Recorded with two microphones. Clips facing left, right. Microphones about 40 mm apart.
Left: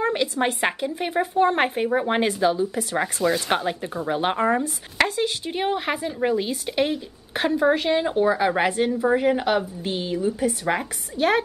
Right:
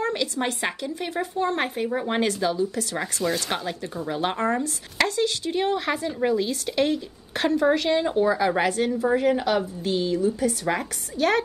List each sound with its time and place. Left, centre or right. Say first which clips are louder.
0.0 s a woman's voice: left 3 dB; left
10.6 s a woman's voice: left 1 dB; centre